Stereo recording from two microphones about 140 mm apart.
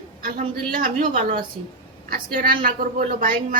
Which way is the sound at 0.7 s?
75° right (ahead or behind).